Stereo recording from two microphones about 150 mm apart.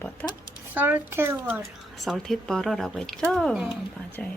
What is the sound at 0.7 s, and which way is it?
Speech, 10° right (ahead or behind).